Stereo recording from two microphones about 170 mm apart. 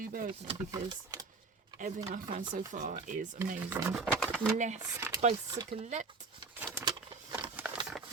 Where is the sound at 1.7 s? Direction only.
45° right (ahead or behind).